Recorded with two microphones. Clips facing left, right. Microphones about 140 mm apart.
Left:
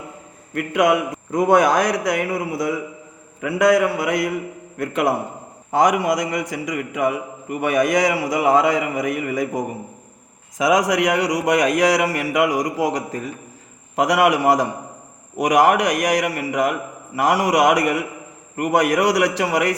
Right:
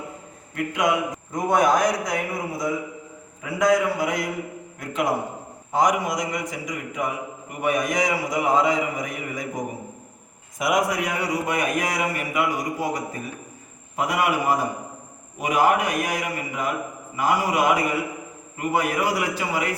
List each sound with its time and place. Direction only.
0.5 s a man's voice: 65° left (ahead or behind)
10.6 s a man's voice: 90° left